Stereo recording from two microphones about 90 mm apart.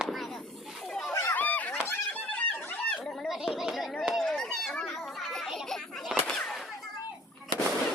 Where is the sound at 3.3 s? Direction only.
5° right (ahead or behind).